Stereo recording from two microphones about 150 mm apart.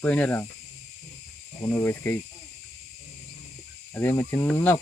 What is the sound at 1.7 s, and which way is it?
Speech, 15° left (ahead or behind).